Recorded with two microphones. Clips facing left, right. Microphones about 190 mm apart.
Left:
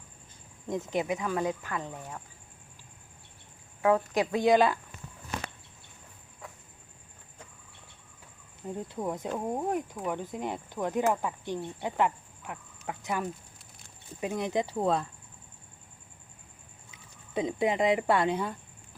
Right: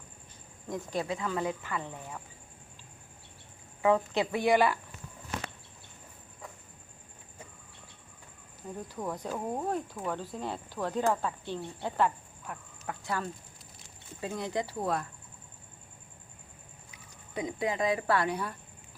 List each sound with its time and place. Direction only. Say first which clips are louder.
0.7 s speech: left 3 dB; 20° left (ahead or behind)
3.8 s speech: left 1 dB; 10° left (ahead or behind)
8.7 s speech: left 3 dB; 20° left (ahead or behind)
16.9 s speech: left 5 dB; 25° left (ahead or behind)